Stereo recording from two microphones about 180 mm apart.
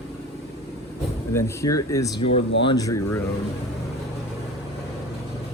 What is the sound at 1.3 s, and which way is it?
Speech, 20° left (ahead or behind).